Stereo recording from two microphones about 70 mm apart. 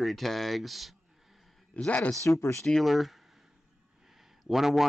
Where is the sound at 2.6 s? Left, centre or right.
Centre.